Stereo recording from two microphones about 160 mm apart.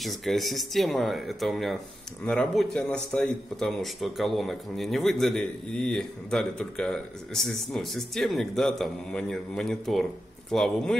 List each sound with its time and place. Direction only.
0.0 s a man's voice: centre (ahead or behind)